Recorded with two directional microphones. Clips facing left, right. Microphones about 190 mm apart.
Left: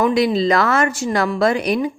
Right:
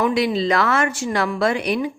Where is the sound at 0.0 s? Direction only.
40° left (ahead or behind).